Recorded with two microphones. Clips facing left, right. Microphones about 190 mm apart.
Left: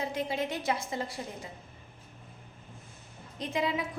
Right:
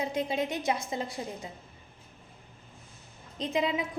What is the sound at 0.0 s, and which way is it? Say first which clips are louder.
A woman's voice: right 2 dB; 20° right (ahead or behind).